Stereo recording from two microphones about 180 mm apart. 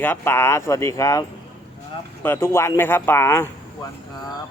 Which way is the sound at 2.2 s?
15° left (ahead or behind).